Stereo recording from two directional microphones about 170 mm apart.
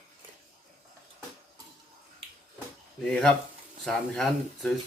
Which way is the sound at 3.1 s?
5° left (ahead or behind).